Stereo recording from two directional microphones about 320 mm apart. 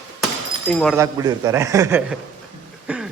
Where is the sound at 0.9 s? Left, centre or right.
Centre.